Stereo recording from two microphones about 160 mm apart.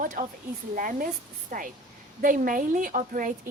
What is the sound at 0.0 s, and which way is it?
A woman's voice, 55° right (ahead or behind).